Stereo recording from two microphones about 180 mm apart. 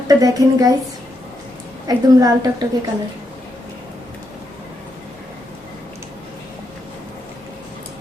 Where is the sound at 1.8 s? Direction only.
20° right (ahead or behind).